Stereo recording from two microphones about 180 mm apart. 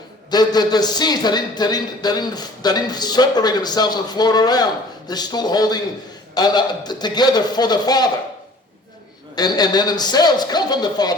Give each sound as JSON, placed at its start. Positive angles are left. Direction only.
{"t": 0.3, "sound": "a man's voice", "side_deg": 20}
{"t": 9.3, "sound": "a man's voice", "side_deg": 20}